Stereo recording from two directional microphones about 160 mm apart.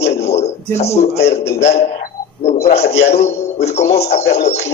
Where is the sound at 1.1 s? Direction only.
90° left.